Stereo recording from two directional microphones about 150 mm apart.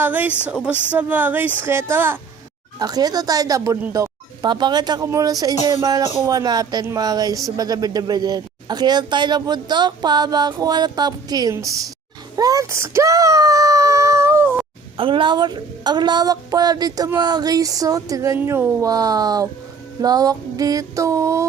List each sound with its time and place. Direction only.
0.0 s speech: 10° right (ahead or behind)
12.4 s a sound: 25° right (ahead or behind)
14.9 s speech: 35° right (ahead or behind)